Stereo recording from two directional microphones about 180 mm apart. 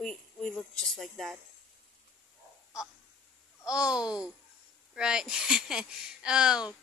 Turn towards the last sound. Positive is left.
turn(degrees=-5)  # may be behind; listen again after turning